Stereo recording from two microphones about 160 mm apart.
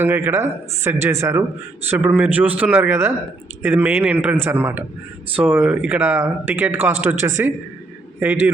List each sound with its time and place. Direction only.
0.0 s speech: 15° right (ahead or behind)